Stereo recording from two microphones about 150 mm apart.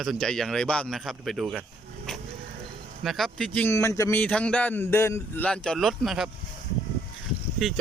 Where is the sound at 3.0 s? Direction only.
Centre (ahead or behind); by 4.2 s 20° left (ahead or behind).